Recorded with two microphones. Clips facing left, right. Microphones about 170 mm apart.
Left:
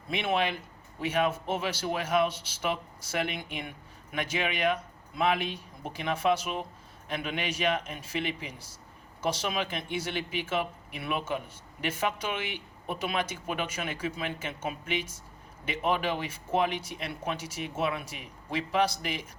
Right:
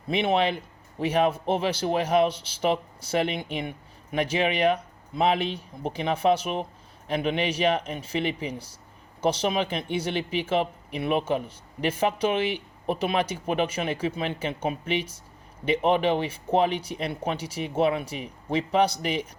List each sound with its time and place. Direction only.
0.1 s speech: 30° right (ahead or behind)